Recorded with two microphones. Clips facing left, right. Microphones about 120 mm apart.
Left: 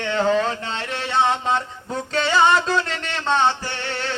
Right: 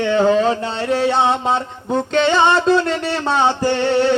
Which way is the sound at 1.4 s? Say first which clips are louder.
Right 4 dB; 5° right (ahead or behind).